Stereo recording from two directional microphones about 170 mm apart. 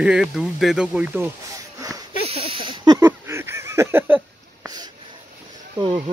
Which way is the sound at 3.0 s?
15° right (ahead or behind).